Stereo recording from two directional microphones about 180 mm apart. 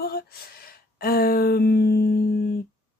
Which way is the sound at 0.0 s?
60° left (ahead or behind).